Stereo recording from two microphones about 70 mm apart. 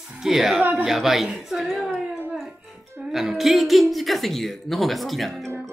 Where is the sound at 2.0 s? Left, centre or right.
Right.